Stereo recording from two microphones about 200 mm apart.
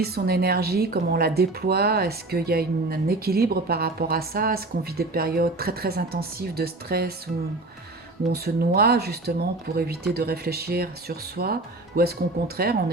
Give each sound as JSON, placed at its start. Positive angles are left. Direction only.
{"t": 0.0, "sound": "speech", "side_deg": -50}
{"t": 8.3, "sound": "speech", "side_deg": -50}
{"t": 12.6, "sound": "speech", "side_deg": -50}